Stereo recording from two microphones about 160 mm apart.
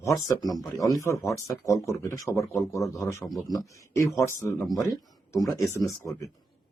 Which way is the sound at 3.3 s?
Centre (ahead or behind).